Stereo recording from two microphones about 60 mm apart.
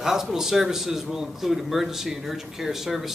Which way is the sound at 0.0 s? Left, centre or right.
Centre.